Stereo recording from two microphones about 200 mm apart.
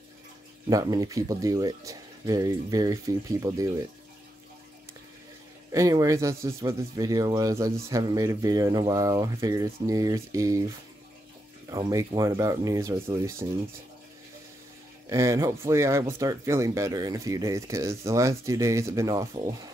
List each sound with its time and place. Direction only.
0.7 s speech: 20° right (ahead or behind)
5.7 s speech: 15° right (ahead or behind)
11.7 s speech: 15° right (ahead or behind)
15.0 s speech: 15° right (ahead or behind)